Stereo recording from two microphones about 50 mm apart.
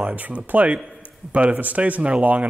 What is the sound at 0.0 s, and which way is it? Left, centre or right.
Speech, right.